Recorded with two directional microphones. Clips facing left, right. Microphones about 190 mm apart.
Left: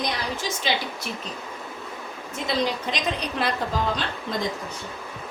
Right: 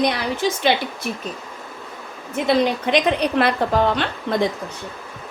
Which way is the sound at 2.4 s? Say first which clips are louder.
Right 7 dB; 60° right (ahead or behind).